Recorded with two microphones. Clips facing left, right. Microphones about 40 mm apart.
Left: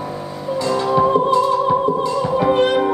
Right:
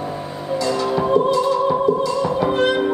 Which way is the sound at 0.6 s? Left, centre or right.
Left.